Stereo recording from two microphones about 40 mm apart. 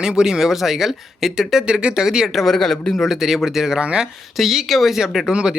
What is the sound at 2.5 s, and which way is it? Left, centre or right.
Speech, centre.